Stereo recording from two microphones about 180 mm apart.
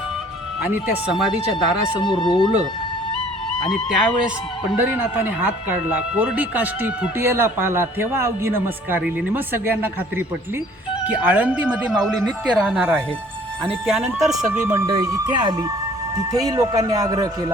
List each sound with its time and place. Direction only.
0.6 s speech: 10° right (ahead or behind)
2.0 s speech: 25° left (ahead or behind)
3.7 s speech: centre (ahead or behind)
14.2 s speech: centre (ahead or behind)
14.7 s speech: 20° right (ahead or behind)